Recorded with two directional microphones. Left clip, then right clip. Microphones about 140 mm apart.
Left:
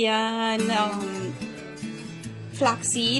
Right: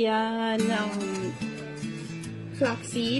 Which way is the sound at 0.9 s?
35° left (ahead or behind).